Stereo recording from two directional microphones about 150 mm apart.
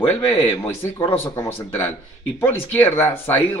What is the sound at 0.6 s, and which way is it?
Speech, 15° left (ahead or behind).